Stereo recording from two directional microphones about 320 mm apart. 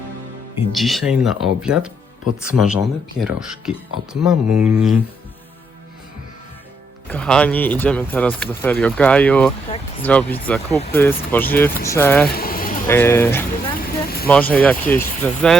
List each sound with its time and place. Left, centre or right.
0.7 s speech: centre
7.1 s speech: centre
10.7 s speech: centre
10.9 s speech: centre
11.7 s speech: left
11.9 s speech: centre
12.3 s a sound: left
12.9 s speech: centre
13.7 s vehicle: left
14.3 s speech: centre